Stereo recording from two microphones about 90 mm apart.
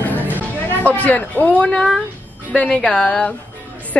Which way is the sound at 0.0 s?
20° left (ahead or behind).